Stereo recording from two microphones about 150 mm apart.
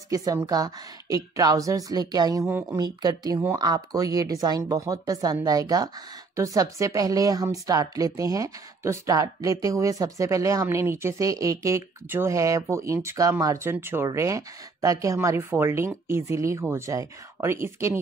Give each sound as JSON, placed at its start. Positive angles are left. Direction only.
{"t": 0.1, "sound": "speech", "side_deg": -25}